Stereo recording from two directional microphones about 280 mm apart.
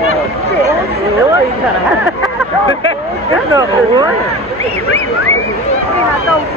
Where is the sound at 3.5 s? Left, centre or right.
Centre.